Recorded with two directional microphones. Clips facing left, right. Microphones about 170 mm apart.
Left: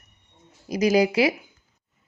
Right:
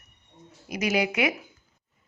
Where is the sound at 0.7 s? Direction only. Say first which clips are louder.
Left 6 dB; 35° left (ahead or behind).